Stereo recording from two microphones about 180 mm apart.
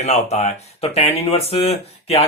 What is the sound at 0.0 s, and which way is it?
Speech, 35° left (ahead or behind).